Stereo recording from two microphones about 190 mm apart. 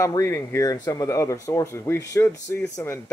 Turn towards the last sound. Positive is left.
turn(degrees=10)  # may be behind; listen again after turning